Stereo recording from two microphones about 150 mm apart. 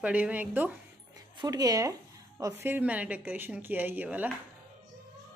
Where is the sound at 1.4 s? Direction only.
25° right (ahead or behind).